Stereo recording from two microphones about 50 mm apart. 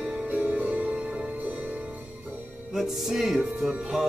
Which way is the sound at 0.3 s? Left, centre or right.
Right.